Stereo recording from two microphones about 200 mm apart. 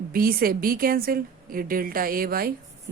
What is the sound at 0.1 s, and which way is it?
A woman's voice, 45° right (ahead or behind).